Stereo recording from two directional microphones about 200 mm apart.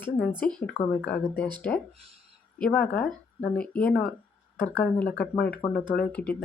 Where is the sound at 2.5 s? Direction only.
5° left (ahead or behind).